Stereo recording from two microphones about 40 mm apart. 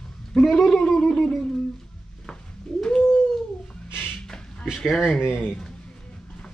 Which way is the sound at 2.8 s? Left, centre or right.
Centre.